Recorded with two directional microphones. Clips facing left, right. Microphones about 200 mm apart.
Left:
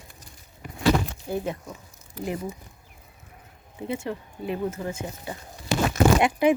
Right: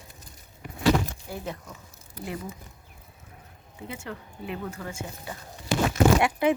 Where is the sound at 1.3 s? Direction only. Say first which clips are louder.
Left 8 dB; 20° left (ahead or behind).